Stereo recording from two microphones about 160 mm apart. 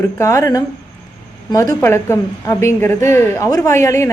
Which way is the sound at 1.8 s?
15° left (ahead or behind).